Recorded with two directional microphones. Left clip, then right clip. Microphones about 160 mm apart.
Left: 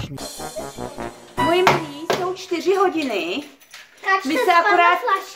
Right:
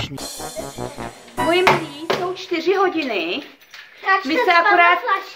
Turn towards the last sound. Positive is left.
turn(degrees=5)  # may be behind; listen again after turning